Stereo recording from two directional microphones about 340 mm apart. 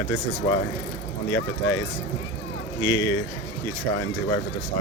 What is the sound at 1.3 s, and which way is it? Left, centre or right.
Speech, left.